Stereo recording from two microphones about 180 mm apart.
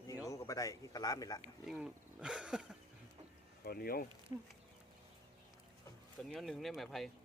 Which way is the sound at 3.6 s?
55° left (ahead or behind).